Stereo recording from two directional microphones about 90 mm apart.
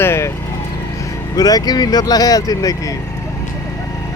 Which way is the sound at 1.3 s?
45° left (ahead or behind).